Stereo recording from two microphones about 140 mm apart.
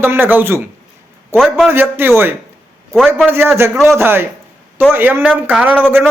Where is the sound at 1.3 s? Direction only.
Centre (ahead or behind).